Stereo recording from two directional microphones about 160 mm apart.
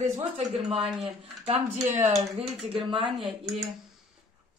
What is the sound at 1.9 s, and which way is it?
Speech, 45° right (ahead or behind).